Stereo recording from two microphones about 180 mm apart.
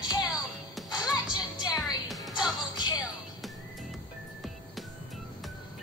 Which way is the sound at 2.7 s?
25° left (ahead or behind).